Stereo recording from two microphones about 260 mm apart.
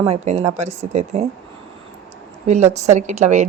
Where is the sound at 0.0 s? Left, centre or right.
Right.